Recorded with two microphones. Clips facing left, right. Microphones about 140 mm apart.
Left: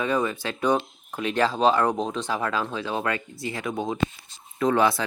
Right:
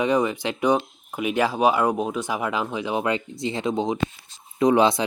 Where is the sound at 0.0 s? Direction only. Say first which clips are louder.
Right 4 dB; 15° right (ahead or behind).